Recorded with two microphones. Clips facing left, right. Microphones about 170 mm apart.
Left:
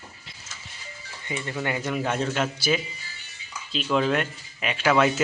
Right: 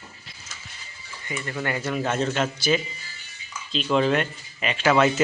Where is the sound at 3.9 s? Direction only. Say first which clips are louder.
Right 2 dB; centre (ahead or behind).